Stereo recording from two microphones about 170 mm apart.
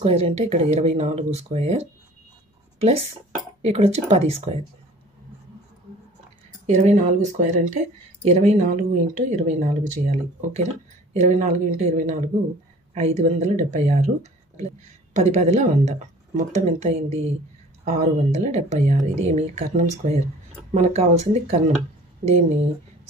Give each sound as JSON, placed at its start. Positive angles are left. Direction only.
{"t": 0.0, "sound": "speech", "side_deg": -40}
{"t": 3.6, "sound": "speech", "side_deg": -40}
{"t": 6.6, "sound": "speech", "side_deg": -45}